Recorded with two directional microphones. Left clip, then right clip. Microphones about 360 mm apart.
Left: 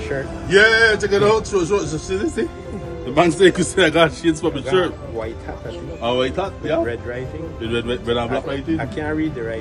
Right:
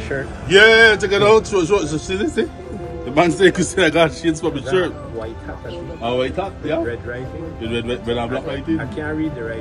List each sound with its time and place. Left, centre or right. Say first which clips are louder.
0.5 s a man's voice: right 3 dB; centre
3.2 s a man's voice: even; centre
6.0 s a man's voice: left 1 dB; centre
8.7 s speech: left 1 dB; centre